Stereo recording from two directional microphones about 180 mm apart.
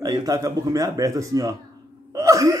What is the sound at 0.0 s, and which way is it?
A man's voice, 20° right (ahead or behind).